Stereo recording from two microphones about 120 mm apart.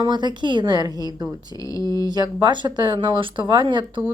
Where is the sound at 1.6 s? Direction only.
30° left (ahead or behind).